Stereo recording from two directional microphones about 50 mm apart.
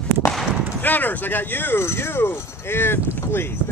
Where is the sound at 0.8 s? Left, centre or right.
Left.